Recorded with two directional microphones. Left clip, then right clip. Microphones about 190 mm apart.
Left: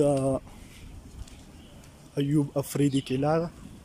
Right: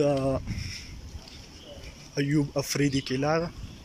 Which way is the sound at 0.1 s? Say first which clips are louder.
Left 1 dB; 5° left (ahead or behind).